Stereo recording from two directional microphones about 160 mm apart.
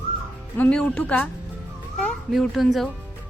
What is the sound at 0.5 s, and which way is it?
Speech, 10° left (ahead or behind).